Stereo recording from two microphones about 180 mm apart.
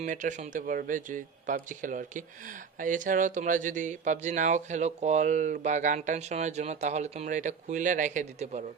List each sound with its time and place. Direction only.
0.0 s speech: 45° right (ahead or behind)